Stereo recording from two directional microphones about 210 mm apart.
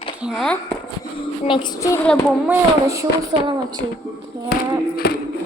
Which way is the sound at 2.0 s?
5° left (ahead or behind).